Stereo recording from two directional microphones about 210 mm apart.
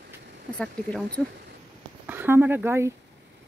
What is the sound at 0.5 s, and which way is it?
Speech, 5° left (ahead or behind).